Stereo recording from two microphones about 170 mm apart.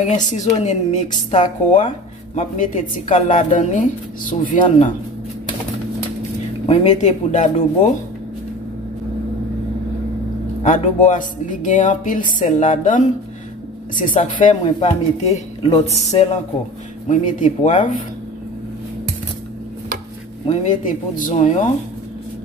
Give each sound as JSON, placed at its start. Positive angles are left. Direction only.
{"t": 0.0, "sound": "speech", "side_deg": 45}
{"t": 6.6, "sound": "speech", "side_deg": 40}
{"t": 10.6, "sound": "speech", "side_deg": 45}
{"t": 20.4, "sound": "speech", "side_deg": 50}